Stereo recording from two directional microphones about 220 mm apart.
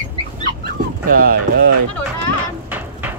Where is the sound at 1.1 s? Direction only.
40° right (ahead or behind).